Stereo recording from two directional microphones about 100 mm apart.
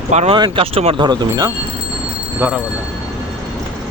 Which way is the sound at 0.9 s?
50° right (ahead or behind).